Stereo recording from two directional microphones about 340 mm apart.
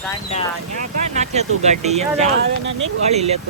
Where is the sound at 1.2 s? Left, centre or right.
Centre.